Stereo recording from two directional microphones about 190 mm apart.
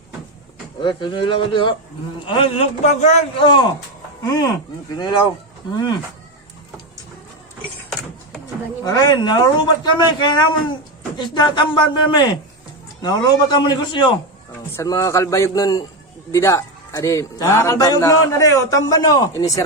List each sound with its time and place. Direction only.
0.8 s a man's voice: 25° left (ahead or behind)
8.8 s a man's voice: 20° left (ahead or behind)